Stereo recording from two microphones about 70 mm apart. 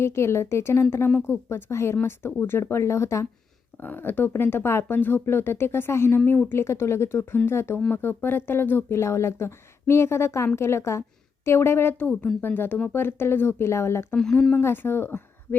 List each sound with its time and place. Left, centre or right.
0.0 s speech: left
3.8 s a woman's voice: left